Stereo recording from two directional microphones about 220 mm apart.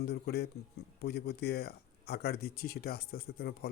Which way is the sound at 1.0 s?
50° left (ahead or behind).